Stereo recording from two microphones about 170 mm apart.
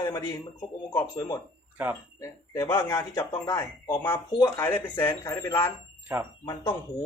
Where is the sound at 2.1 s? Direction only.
20° left (ahead or behind).